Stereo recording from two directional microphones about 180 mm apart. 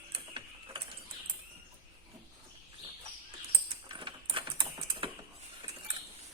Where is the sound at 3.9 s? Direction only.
25° right (ahead or behind).